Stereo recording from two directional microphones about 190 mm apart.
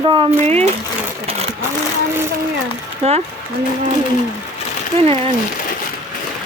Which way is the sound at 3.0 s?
35° right (ahead or behind).